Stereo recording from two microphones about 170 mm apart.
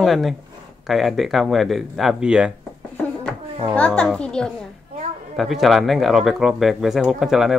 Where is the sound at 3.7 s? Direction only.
5° left (ahead or behind).